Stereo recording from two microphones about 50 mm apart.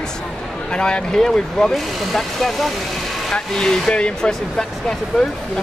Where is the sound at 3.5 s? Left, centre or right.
Centre.